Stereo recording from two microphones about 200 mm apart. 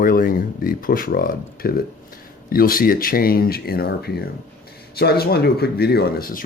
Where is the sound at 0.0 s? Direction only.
45° left (ahead or behind).